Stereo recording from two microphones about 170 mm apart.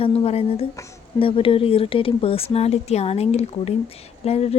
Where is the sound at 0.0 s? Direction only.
35° left (ahead or behind).